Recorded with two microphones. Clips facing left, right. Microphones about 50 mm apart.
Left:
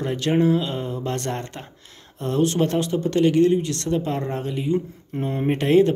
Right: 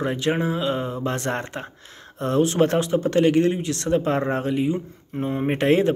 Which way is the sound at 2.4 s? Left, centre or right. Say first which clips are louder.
Even; right.